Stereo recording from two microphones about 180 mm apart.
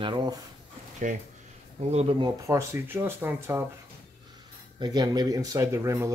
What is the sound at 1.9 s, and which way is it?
Speech, 35° right (ahead or behind).